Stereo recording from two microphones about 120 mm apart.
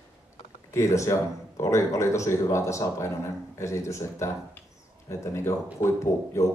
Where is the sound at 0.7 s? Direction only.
25° left (ahead or behind).